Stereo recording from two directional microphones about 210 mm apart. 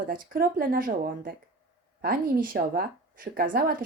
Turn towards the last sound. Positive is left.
turn(degrees=-40)  # may be behind; listen again after turning